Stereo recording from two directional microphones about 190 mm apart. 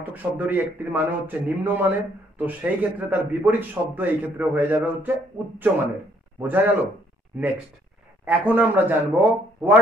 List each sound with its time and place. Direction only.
0.0 s a man's voice: 10° right (ahead or behind)
6.4 s a man's voice: 10° right (ahead or behind)